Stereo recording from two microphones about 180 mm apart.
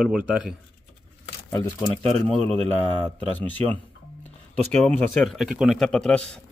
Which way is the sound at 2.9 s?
10° left (ahead or behind).